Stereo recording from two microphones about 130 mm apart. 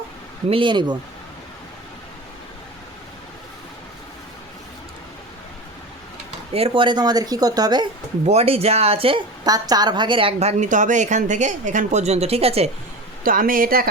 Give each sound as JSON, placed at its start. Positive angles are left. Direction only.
{"t": 0.5, "sound": "speech", "side_deg": -40}
{"t": 6.5, "sound": "speech", "side_deg": -45}
{"t": 8.3, "sound": "a woman's voice", "side_deg": -55}
{"t": 10.6, "sound": "speech", "side_deg": -75}
{"t": 13.2, "sound": "speech", "side_deg": -90}